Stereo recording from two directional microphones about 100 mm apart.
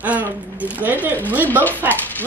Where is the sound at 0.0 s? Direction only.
15° right (ahead or behind).